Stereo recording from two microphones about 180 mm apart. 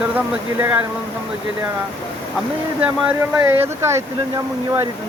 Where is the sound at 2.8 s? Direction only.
10° right (ahead or behind).